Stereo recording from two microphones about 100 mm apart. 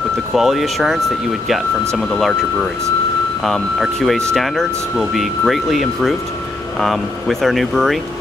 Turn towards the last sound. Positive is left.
turn(degrees=0)  # may be behind; listen again after turning